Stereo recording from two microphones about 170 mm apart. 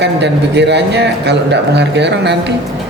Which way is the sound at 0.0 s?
90° right.